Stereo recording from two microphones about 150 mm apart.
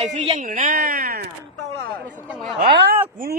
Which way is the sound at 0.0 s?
45° right (ahead or behind).